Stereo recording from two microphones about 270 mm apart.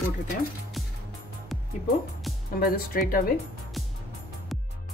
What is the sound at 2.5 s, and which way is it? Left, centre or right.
Speech, left.